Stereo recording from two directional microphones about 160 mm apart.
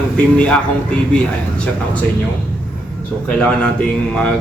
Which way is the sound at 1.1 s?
5° left (ahead or behind).